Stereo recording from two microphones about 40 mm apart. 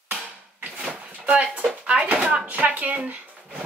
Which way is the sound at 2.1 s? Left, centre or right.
Centre.